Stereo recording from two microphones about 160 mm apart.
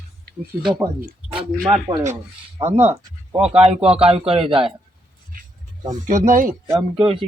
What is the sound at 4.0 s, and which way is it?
Speech, 35° right (ahead or behind).